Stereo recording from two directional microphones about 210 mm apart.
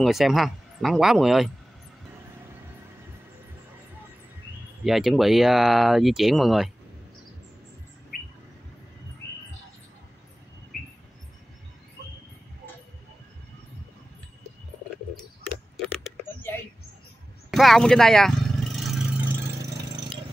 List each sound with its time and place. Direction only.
0.0 s speech: centre (ahead or behind)
4.8 s speech: centre (ahead or behind)
8.1 s bird: 45° left (ahead or behind)
15.8 s a sound: 5° left (ahead or behind)
17.5 s vehicle: centre (ahead or behind)